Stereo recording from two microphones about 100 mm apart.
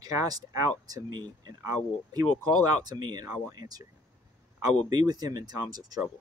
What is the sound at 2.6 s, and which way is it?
Speech, 40° right (ahead or behind).